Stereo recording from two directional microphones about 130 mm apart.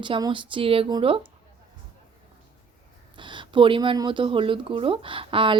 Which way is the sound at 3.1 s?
40° right (ahead or behind).